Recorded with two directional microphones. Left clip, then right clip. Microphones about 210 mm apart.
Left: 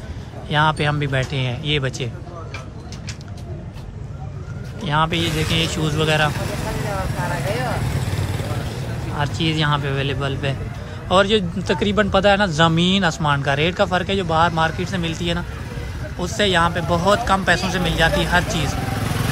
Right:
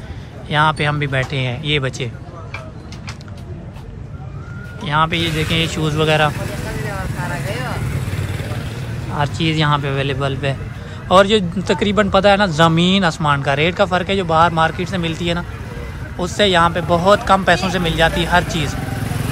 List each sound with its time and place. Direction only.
0.5 s speech: 15° left (ahead or behind)
4.8 s speech: 15° left (ahead or behind)
6.9 s vehicle: 25° left (ahead or behind); by 8.8 s 50° left (ahead or behind)
9.1 s speech: 10° left (ahead or behind)